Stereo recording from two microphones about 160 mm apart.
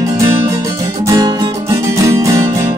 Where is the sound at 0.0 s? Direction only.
20° right (ahead or behind).